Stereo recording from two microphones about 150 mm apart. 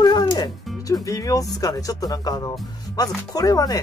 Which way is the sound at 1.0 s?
20° left (ahead or behind).